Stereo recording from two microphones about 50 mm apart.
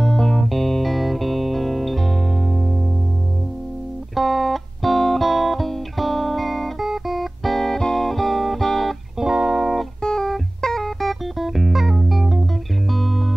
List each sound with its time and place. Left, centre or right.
0.0 s music: centre
4.1 s music: centre
9.2 s music: centre
10.0 s music: centre